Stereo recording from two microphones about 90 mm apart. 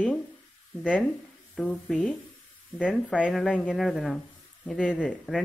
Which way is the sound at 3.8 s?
Centre (ahead or behind).